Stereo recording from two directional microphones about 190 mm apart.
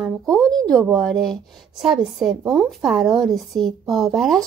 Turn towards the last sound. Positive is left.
turn(degrees=0)  # may be behind; listen again after turning